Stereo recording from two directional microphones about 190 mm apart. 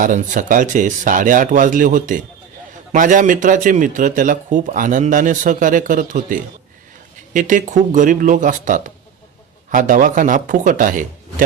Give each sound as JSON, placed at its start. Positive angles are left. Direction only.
{"t": 0.0, "sound": "a man's voice", "side_deg": -45}